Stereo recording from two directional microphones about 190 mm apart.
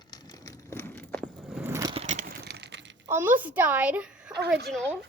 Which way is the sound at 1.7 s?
20° right (ahead or behind).